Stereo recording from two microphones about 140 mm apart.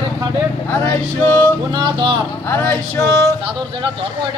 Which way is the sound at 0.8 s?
15° left (ahead or behind).